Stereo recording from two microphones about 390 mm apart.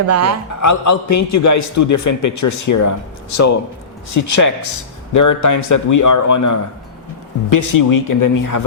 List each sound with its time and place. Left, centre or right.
0.1 s speech: right
0.6 s a man's voice: left